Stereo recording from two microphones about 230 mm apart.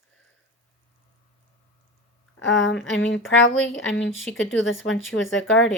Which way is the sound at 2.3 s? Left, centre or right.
Left.